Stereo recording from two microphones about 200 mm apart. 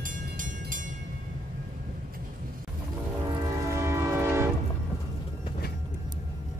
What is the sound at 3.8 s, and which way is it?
Train, 15° right (ahead or behind).